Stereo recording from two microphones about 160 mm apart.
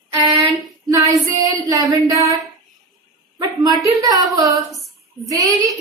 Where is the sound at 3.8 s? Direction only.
20° right (ahead or behind).